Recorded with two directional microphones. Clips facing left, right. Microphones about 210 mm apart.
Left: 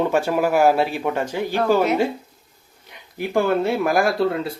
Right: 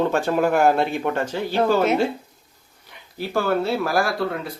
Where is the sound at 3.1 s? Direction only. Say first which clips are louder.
Left 2 dB; 15° left (ahead or behind).